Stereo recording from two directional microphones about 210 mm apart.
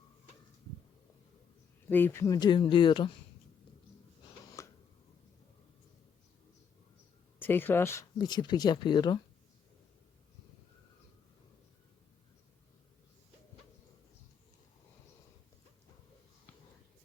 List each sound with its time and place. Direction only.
1.9 s speech: 10° left (ahead or behind)
4.6 s a sound: 15° left (ahead or behind)
7.3 s speech: 10° left (ahead or behind)